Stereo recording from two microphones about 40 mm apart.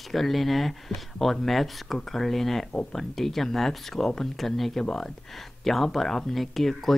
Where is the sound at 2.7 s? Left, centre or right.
Left.